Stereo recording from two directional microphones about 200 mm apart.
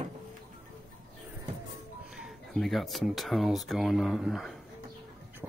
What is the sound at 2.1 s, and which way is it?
Speech, centre (ahead or behind).